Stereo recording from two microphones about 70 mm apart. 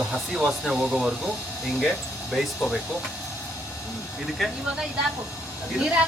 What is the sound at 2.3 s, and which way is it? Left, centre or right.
Speech, centre.